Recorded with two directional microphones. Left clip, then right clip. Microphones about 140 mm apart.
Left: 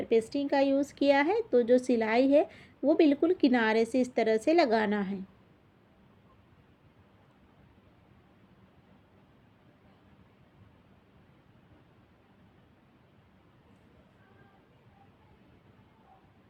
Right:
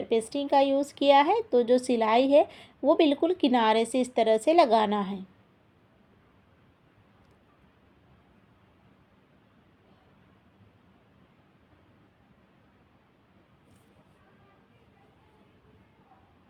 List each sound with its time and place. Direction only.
0.1 s speech: 40° right (ahead or behind)